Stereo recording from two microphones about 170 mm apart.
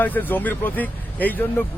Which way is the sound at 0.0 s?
10° left (ahead or behind).